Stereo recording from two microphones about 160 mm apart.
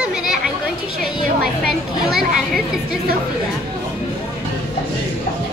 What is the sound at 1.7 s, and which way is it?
Speech, centre (ahead or behind).